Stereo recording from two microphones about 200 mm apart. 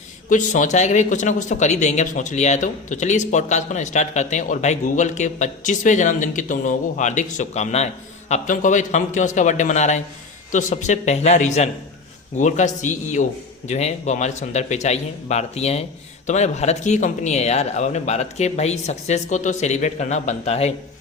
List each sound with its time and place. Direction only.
0.3 s speech: 40° left (ahead or behind)